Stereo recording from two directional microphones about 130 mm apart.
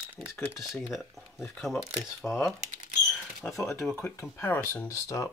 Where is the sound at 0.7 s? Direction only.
Centre (ahead or behind).